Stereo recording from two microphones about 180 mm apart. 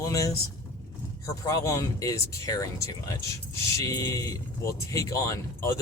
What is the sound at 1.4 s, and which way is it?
Speech, 20° left (ahead or behind).